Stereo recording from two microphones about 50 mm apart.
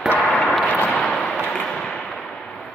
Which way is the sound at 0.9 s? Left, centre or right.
Centre.